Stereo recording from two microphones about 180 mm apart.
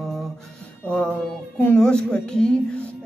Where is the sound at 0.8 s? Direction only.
5° left (ahead or behind).